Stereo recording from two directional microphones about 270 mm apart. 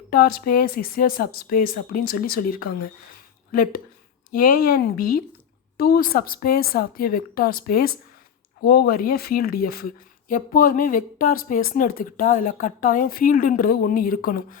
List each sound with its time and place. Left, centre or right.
0.1 s speech: left